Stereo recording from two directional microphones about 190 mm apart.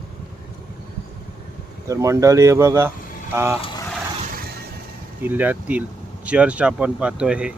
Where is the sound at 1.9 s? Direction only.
15° right (ahead or behind).